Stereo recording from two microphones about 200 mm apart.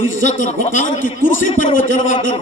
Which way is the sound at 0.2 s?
40° left (ahead or behind).